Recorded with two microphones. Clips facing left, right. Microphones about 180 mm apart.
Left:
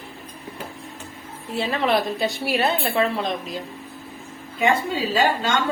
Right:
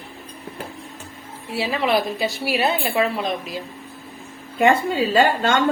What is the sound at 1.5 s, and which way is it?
A woman's voice, 5° right (ahead or behind).